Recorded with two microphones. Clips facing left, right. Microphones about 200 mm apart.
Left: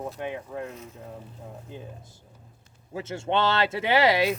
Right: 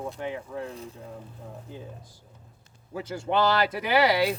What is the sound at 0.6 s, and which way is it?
Speech, 30° right (ahead or behind).